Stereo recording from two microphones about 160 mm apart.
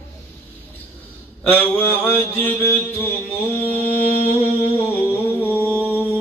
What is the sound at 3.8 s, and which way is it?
Mantra, 40° left (ahead or behind).